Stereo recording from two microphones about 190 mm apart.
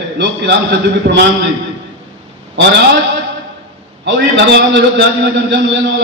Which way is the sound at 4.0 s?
65° right (ahead or behind).